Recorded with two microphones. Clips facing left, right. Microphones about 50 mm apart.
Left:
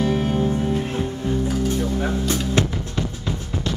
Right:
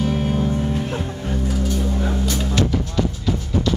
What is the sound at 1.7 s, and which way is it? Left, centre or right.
Music, left.